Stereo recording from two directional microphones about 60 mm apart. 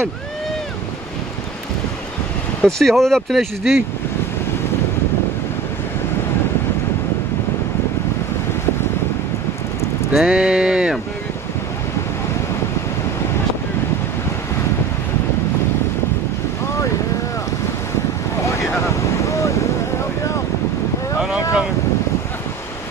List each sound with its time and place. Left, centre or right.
2.6 s speech: centre
10.1 s speech: centre
18.4 s boat: left